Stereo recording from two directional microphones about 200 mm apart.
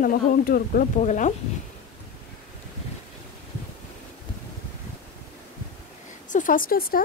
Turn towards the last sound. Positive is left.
turn(degrees=45)  # may be behind; listen again after turning